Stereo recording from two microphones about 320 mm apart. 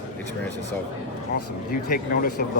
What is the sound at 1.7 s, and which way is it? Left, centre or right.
Speech, left.